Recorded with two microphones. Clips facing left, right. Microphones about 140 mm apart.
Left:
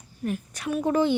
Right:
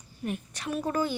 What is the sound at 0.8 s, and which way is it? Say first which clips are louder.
Speech: left 7 dB; 20° left (ahead or behind).